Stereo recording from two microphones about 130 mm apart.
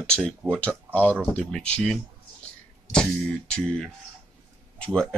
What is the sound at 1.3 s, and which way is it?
Speech, 10° left (ahead or behind).